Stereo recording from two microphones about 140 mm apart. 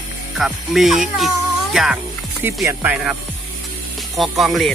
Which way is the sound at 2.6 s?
10° right (ahead or behind).